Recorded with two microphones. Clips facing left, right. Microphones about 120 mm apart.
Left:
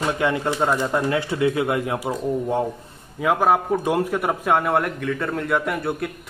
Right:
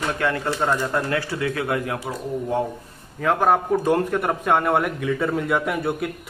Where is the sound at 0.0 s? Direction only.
20° left (ahead or behind).